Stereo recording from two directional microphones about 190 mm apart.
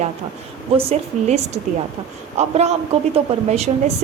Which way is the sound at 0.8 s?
35° right (ahead or behind).